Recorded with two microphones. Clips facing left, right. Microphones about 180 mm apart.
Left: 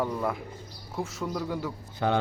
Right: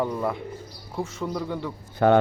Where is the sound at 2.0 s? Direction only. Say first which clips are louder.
Right 8 dB; 55° right (ahead or behind).